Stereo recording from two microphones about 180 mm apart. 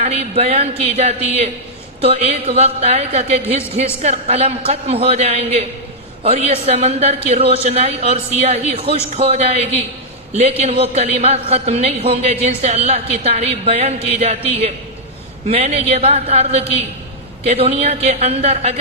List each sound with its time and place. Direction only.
0.0 s a man's voice: 35° right (ahead or behind)